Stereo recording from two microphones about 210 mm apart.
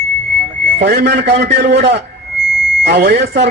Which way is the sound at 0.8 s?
50° right (ahead or behind).